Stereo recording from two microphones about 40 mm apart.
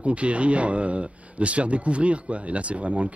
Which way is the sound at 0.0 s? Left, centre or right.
Right.